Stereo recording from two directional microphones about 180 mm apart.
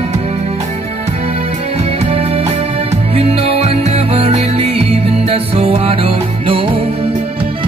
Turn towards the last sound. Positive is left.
turn(degrees=-30)  # may be behind; listen again after turning